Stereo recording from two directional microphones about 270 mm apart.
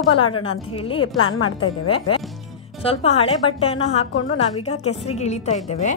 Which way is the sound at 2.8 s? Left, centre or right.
Left.